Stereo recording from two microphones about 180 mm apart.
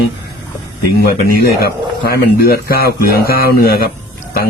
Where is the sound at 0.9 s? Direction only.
60° left (ahead or behind).